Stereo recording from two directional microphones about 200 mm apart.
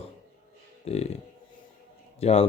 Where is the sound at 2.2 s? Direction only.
30° left (ahead or behind).